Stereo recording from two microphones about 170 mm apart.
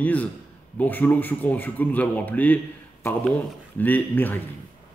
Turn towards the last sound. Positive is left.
turn(degrees=10)  # may be behind; listen again after turning